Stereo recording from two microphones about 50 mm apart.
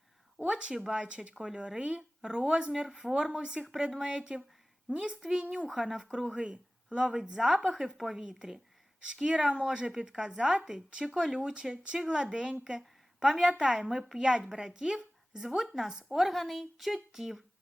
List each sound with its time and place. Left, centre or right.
0.4 s speech: centre
5.6 s speech: centre
6.1 s speech: right
7.7 s speech: centre
8.2 s speech: centre
12.8 s a sound: centre
13.5 s speech: right
13.7 s speech: centre